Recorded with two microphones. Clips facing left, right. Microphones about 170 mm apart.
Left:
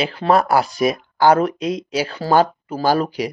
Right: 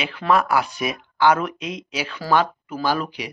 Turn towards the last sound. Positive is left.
turn(degrees=40)  # may be behind; listen again after turning